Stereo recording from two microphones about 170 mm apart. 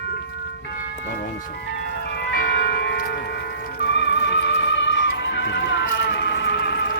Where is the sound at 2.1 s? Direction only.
65° left (ahead or behind).